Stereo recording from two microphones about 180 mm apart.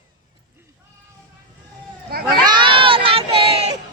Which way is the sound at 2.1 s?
55° right (ahead or behind).